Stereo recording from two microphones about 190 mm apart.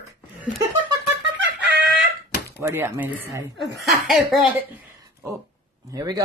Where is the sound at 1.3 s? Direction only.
60° right (ahead or behind).